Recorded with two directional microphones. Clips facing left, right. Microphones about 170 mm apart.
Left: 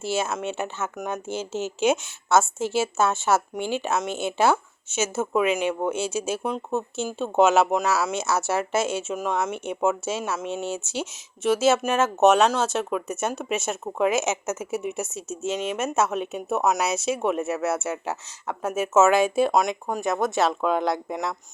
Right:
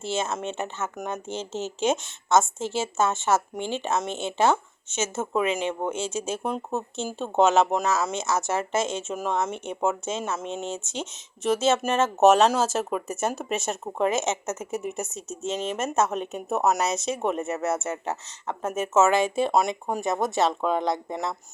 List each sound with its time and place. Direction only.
0.0 s speech: 10° left (ahead or behind)
5.5 s speech: 25° right (ahead or behind)
5.8 s speech: 10° left (ahead or behind)